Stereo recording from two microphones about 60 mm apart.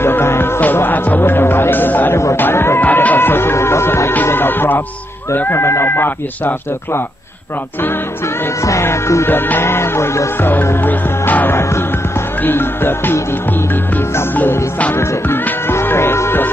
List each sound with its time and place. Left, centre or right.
0.0 s music: left
0.7 s music: left
2.3 s chatter: left
2.8 s music: left
4.1 s music: left
5.3 s speech: left
8.8 s music: left
10.4 s music: left
12.4 s speech: left
14.3 s music: left